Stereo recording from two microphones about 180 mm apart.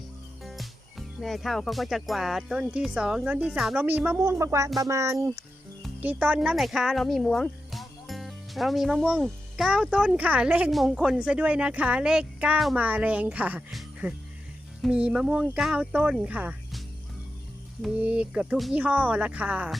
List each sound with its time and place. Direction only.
0.4 s speech: centre (ahead or behind)
17.8 s speech: 5° right (ahead or behind)